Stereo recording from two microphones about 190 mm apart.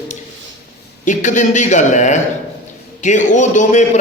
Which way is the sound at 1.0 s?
40° left (ahead or behind).